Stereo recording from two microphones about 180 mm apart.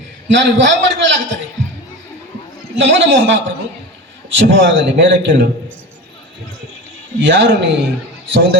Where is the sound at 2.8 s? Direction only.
80° right.